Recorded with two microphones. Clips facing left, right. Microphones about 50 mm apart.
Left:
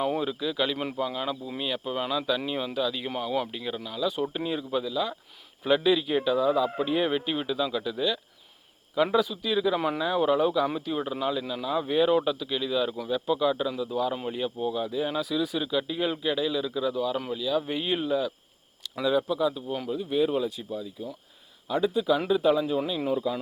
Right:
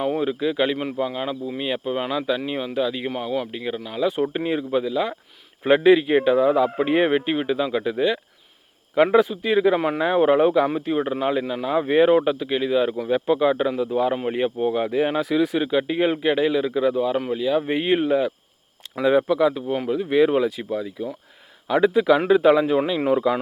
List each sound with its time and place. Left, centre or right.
0.3 s speech: right
3.8 s speech: right
13.1 s speech: right
23.0 s speech: right